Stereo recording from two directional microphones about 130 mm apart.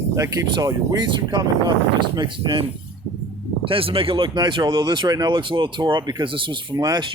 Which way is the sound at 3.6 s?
45° right (ahead or behind).